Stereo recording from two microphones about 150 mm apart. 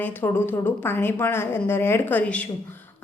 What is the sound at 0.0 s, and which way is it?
A woman's voice, 15° left (ahead or behind).